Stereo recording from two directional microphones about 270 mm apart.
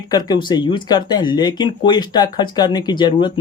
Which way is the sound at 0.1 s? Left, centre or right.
Centre.